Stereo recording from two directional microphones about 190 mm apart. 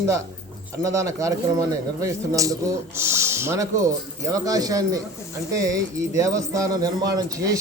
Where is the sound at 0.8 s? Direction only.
15° right (ahead or behind).